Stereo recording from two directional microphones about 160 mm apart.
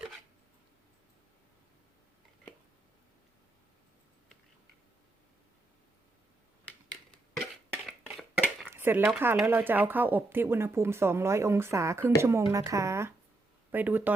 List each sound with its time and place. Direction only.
8.6 s speech: 15° right (ahead or behind)